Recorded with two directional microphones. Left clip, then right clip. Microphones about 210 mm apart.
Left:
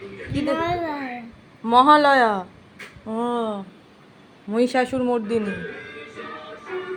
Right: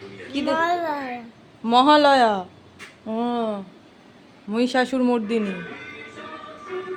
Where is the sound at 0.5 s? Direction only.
15° right (ahead or behind).